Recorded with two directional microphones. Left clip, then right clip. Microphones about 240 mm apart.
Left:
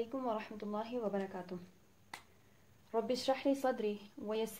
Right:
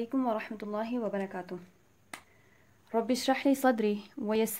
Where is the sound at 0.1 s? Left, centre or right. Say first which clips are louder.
Right 7 dB; right.